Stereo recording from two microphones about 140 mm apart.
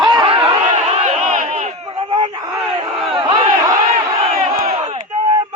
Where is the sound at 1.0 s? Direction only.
60° right (ahead or behind).